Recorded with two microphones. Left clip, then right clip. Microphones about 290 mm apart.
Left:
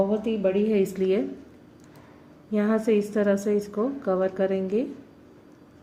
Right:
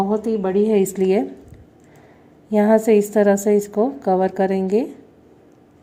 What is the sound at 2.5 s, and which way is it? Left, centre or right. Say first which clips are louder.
A woman's voice: right 9 dB; right.